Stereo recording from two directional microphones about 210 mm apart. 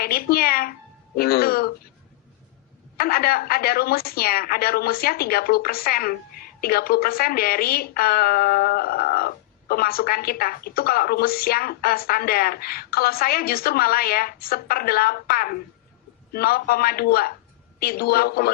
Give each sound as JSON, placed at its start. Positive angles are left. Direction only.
{"t": 0.0, "sound": "speech", "side_deg": 45}
{"t": 3.0, "sound": "a woman's voice", "side_deg": 45}